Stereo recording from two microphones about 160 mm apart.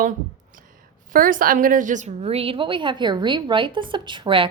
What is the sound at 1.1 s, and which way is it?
A woman's voice, 60° right (ahead or behind).